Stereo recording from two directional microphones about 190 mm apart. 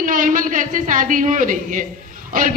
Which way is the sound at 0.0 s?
45° right (ahead or behind).